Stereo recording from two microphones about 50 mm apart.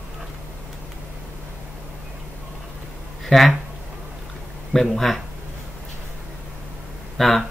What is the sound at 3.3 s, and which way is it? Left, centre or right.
Speech, centre.